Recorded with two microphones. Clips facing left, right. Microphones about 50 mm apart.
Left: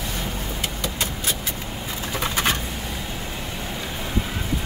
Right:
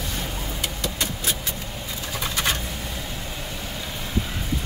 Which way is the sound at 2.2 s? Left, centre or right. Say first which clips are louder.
Left 2 dB; left.